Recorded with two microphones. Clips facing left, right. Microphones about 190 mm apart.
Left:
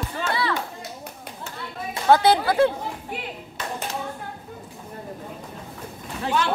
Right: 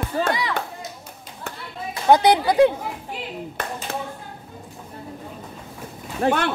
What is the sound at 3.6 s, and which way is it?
Clapping, 55° right (ahead or behind).